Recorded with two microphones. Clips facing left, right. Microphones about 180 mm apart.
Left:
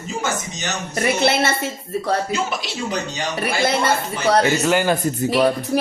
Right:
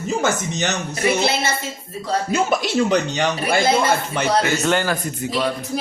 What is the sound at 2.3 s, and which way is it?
Speech, 50° right (ahead or behind).